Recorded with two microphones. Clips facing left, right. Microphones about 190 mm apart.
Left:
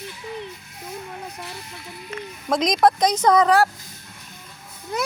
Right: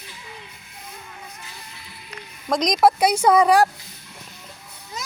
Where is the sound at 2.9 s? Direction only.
10° right (ahead or behind).